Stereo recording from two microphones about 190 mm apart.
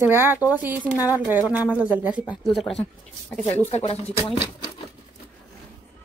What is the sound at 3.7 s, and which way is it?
Speech, 35° left (ahead or behind).